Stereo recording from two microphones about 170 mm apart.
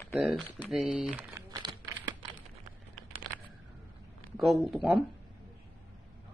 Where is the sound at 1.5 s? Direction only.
25° right (ahead or behind).